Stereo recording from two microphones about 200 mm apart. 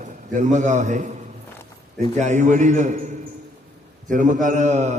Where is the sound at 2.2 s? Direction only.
35° right (ahead or behind).